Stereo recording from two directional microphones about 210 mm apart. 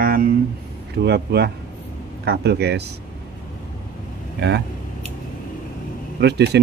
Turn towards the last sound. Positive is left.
turn(degrees=-55)  # may be behind; listen again after turning